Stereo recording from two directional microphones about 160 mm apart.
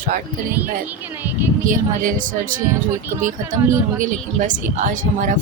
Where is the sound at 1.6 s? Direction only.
55° right (ahead or behind).